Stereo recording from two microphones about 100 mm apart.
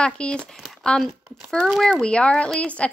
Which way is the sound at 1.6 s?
5° right (ahead or behind).